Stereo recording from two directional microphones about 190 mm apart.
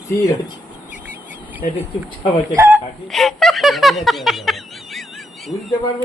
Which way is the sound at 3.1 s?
Centre (ahead or behind).